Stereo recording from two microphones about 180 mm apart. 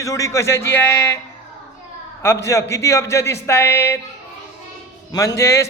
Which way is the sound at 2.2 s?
15° left (ahead or behind).